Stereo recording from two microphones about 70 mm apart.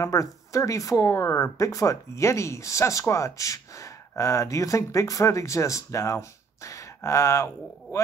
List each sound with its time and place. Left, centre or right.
0.0 s speech: left